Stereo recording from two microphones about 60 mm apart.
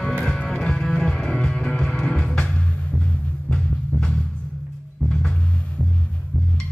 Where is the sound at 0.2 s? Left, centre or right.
Centre.